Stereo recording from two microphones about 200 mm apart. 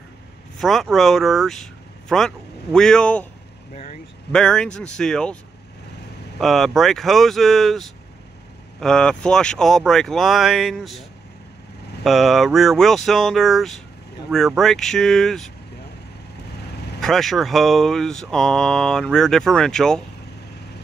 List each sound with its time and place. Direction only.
0.6 s speech: centre (ahead or behind)
3.7 s vehicle: 35° left (ahead or behind)
4.3 s speech: 5° left (ahead or behind)
6.4 s speech: centre (ahead or behind)
17.0 s speech: centre (ahead or behind)